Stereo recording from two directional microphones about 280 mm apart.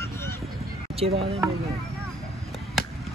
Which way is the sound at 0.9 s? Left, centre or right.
Right.